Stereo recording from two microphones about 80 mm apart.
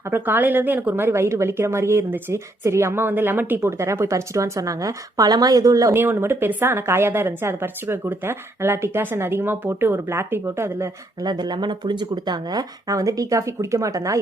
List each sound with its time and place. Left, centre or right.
0.1 s a woman's voice: right
5.9 s a woman's voice: right
11.2 s speech: right